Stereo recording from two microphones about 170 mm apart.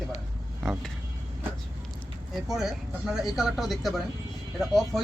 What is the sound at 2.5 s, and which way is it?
Speech, centre (ahead or behind).